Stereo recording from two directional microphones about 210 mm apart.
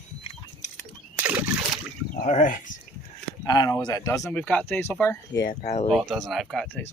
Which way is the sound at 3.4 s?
20° left (ahead or behind).